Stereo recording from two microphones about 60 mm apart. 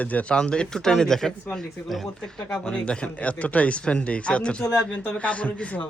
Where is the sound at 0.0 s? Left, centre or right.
Left.